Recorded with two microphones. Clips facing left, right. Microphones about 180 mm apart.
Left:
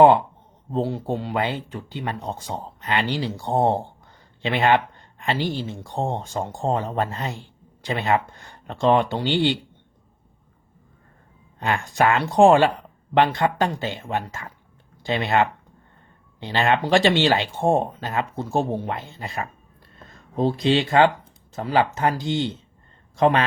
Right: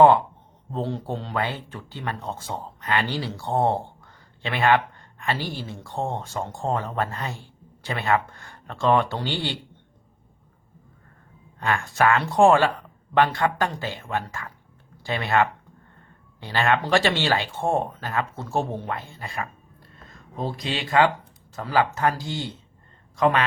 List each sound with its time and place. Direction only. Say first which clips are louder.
0.7 s speech: left 4 dB; 10° left (ahead or behind)
11.6 s speech: left 1 dB; 20° left (ahead or behind)